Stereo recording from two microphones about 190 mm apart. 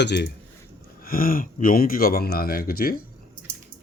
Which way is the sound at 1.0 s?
50° left (ahead or behind).